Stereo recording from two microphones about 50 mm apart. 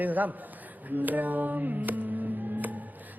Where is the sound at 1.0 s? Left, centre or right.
Right.